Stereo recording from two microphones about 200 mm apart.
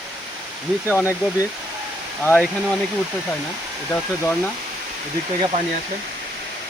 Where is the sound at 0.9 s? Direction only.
10° left (ahead or behind).